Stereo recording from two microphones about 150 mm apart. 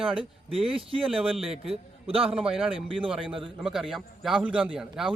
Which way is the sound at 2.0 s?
40° right (ahead or behind).